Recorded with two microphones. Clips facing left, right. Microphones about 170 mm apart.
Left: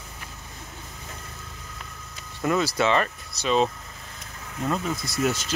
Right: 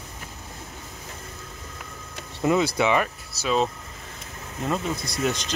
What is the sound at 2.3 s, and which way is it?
Speech, 15° right (ahead or behind).